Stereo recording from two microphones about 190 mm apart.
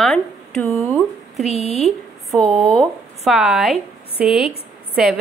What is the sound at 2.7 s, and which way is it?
A woman's voice, centre (ahead or behind).